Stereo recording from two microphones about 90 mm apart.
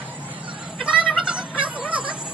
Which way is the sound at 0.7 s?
10° right (ahead or behind).